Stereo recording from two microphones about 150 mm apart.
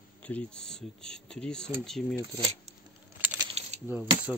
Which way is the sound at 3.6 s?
45° right (ahead or behind).